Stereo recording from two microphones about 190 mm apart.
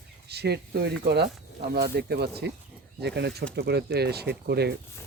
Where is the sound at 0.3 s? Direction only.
60° right (ahead or behind).